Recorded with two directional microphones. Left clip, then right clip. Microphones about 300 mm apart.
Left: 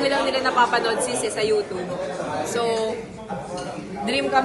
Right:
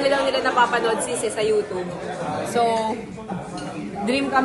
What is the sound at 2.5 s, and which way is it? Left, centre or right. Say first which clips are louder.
Speech: right 4 dB; centre.